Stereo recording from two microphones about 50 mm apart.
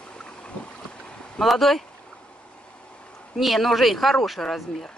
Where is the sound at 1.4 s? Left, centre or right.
Centre.